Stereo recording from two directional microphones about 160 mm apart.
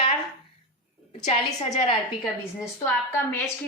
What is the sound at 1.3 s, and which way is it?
Speech, 40° left (ahead or behind).